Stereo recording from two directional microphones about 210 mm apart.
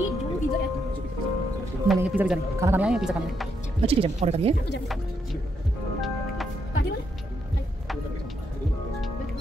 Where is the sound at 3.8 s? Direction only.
30° right (ahead or behind).